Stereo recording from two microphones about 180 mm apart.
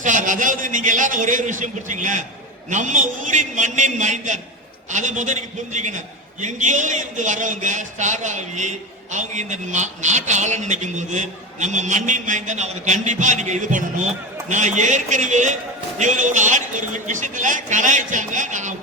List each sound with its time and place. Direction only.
0.0 s a man's voice: 45° right (ahead or behind)